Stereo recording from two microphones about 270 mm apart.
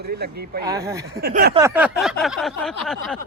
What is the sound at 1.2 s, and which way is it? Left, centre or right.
Speech, right.